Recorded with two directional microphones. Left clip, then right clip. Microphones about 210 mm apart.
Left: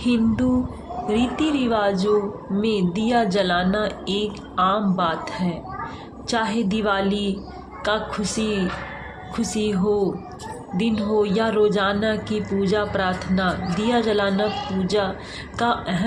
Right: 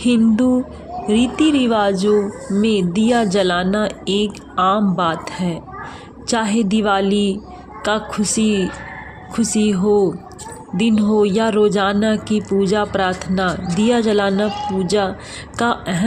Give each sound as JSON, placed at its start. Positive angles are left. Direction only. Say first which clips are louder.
{"t": 0.0, "sound": "speech", "louder": "right 6 dB", "side_deg": -50}